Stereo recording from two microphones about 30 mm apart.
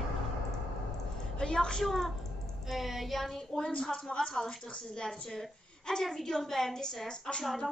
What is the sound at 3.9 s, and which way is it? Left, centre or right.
A woman's voice, left.